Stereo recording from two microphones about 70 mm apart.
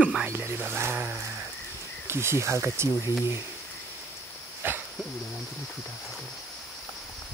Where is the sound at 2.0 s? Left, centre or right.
Right.